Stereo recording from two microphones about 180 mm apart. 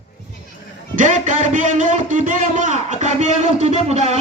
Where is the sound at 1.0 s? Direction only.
45° right (ahead or behind).